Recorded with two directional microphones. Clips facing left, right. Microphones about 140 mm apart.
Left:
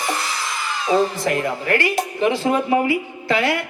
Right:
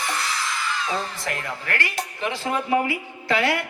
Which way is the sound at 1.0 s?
20° left (ahead or behind).